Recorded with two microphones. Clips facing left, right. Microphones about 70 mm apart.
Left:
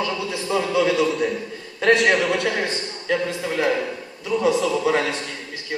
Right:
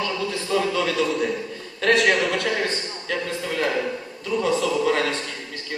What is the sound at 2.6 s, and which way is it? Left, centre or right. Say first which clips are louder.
A man's voice: left 3 dB; centre.